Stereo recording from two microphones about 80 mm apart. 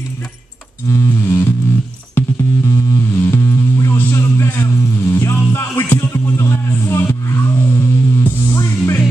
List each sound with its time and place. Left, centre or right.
0.8 s music: left
2.1 s music: left
3.2 s music: left